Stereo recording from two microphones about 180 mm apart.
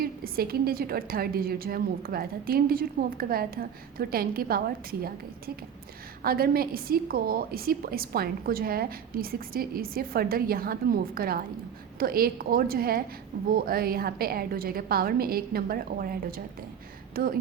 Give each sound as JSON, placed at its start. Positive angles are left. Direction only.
{"t": 0.0, "sound": "a woman's voice", "side_deg": -55}
{"t": 6.2, "sound": "a woman's voice", "side_deg": -55}